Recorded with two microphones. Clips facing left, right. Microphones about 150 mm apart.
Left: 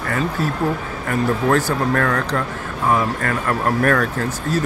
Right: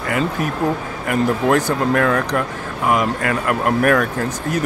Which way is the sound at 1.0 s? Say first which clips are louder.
Right 2 dB; 15° right (ahead or behind).